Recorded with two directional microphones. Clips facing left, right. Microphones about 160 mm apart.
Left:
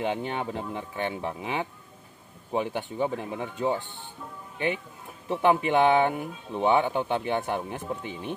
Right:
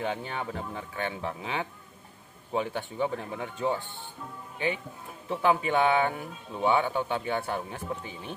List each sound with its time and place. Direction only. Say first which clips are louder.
0.0 s speech: left 3 dB; 20° left (ahead or behind)
5.3 s speech: left 3 dB; 20° left (ahead or behind)